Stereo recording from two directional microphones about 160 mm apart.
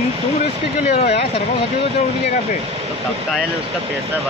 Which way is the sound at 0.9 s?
40° left (ahead or behind).